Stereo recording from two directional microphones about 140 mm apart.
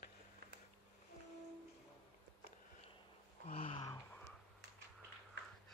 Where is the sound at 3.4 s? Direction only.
40° left (ahead or behind).